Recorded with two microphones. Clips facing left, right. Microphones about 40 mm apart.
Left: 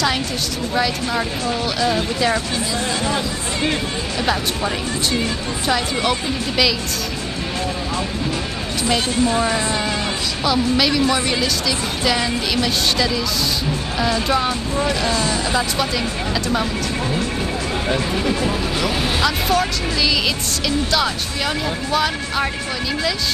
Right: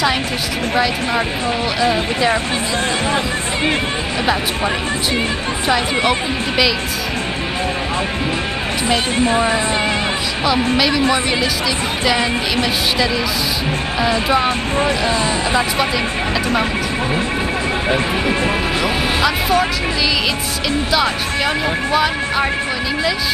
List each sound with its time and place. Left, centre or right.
1.8 s speech: centre
9.1 s speech: right
13.9 s speech: centre
17.8 s speech: right
18.8 s music: centre
21.9 s speech: centre